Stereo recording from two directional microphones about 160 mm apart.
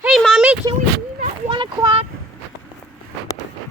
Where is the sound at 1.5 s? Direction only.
30° right (ahead or behind).